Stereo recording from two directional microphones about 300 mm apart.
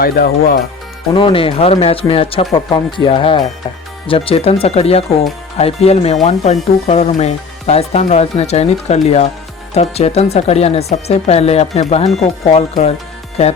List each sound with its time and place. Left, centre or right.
0.0 s speech: left
1.1 s speech: centre